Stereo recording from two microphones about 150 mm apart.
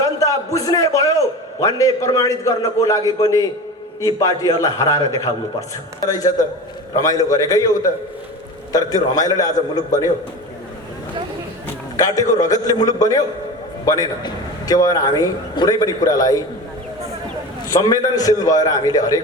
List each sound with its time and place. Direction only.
0.0 s a man's voice: 20° left (ahead or behind)
11.9 s a man's voice: 20° left (ahead or behind)
17.7 s a man's voice: 25° left (ahead or behind)